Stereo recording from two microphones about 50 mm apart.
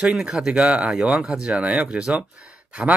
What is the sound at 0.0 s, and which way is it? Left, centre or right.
Speech, centre.